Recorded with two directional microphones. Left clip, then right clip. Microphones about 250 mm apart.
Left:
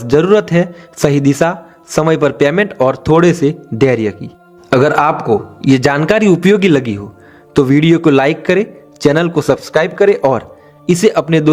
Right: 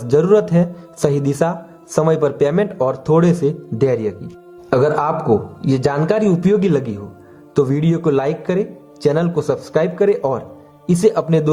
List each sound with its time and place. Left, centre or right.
0.0 s speech: left